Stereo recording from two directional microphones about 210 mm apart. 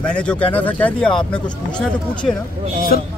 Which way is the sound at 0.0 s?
5° left (ahead or behind).